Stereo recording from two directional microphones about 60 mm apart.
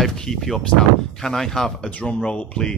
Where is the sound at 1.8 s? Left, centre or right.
Centre.